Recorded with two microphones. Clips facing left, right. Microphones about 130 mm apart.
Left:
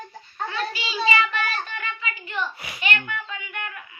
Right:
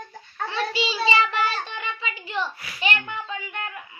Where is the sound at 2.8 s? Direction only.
35° right (ahead or behind).